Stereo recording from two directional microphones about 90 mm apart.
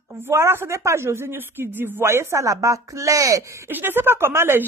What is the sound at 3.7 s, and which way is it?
Speech, 25° right (ahead or behind).